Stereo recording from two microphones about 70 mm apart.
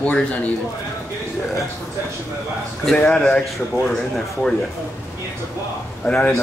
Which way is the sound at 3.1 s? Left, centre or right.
Centre.